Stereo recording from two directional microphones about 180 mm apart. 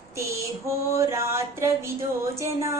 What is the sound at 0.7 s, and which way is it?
Speech, 15° right (ahead or behind).